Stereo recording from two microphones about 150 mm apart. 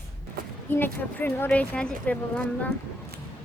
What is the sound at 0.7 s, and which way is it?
A woman's voice, 10° left (ahead or behind).